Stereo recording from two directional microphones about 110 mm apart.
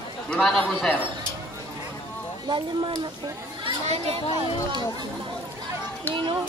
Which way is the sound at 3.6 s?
65° right (ahead or behind).